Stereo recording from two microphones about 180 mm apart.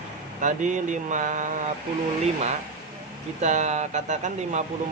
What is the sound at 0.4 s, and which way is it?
Speech, 45° right (ahead or behind).